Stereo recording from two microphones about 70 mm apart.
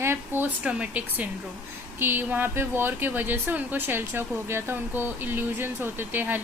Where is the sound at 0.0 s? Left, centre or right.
Right.